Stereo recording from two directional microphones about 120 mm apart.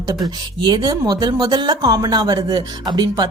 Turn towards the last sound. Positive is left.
turn(degrees=-35)  # may be behind; listen again after turning